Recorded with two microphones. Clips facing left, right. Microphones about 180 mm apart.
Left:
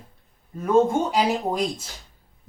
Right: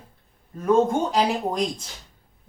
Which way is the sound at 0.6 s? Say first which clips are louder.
Even; 10° left (ahead or behind).